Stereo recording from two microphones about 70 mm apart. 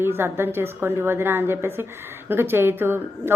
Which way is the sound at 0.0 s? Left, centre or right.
Right.